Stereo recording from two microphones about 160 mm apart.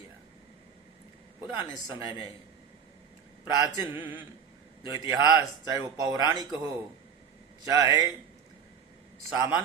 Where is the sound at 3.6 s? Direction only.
15° right (ahead or behind).